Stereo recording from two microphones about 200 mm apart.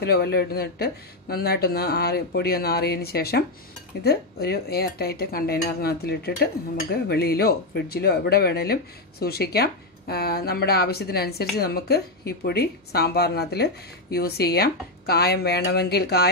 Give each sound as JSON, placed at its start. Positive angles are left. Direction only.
{"t": 0.0, "sound": "speech", "side_deg": 50}